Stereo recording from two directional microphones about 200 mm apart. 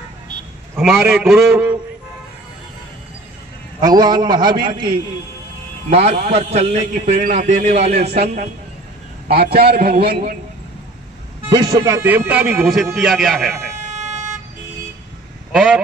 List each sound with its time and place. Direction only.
0.7 s a man's voice: centre (ahead or behind)
3.8 s a man's voice: 20° right (ahead or behind)
9.3 s a man's voice: 50° right (ahead or behind)
11.4 s speech: 20° right (ahead or behind); by 13.6 s centre (ahead or behind)
13.8 s vehicle: 35° right (ahead or behind)
15.5 s a man's voice: centre (ahead or behind)